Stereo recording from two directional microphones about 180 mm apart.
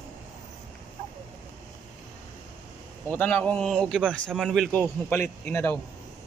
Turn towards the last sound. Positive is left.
turn(degrees=15)  # may be behind; listen again after turning